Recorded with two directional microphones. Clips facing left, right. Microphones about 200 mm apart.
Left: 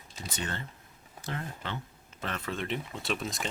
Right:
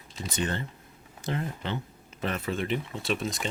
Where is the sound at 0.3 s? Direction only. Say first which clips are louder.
Right 7 dB; 20° right (ahead or behind).